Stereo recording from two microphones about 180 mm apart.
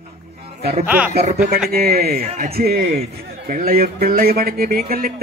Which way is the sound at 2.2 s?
45° right (ahead or behind).